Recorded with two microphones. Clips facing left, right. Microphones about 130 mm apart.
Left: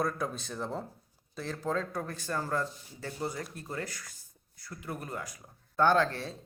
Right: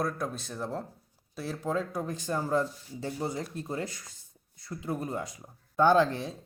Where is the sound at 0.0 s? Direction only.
Centre (ahead or behind).